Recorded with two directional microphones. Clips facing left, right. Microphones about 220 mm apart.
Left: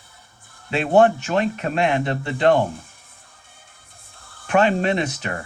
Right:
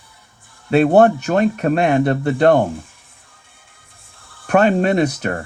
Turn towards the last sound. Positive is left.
turn(degrees=-45)  # may be behind; listen again after turning